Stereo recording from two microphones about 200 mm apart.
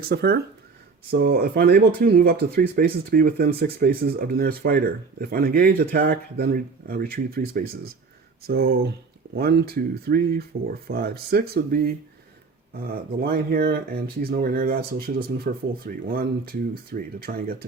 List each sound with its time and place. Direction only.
0.0 s speech: 50° right (ahead or behind)